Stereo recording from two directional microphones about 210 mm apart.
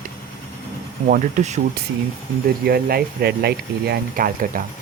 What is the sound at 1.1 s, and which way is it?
Speech, 40° right (ahead or behind).